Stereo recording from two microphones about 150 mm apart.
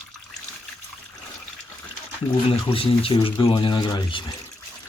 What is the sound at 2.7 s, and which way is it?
Speech, 40° left (ahead or behind).